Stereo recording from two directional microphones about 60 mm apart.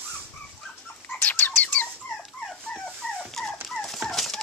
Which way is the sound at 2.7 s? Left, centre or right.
Centre.